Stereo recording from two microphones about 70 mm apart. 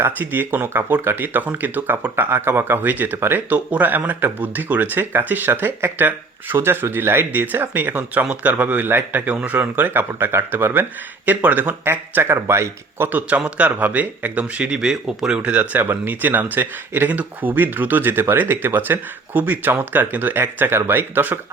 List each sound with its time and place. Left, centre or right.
0.0 s speech: right
13.1 s speech: right